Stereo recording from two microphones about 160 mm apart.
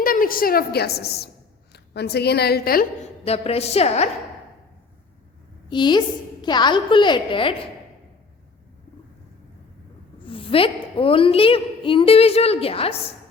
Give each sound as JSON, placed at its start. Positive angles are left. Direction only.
{"t": 0.0, "sound": "a woman's voice", "side_deg": 65}
{"t": 3.2, "sound": "a woman's voice", "side_deg": 40}
{"t": 5.6, "sound": "a woman's voice", "side_deg": 30}
{"t": 10.2, "sound": "a woman's voice", "side_deg": 35}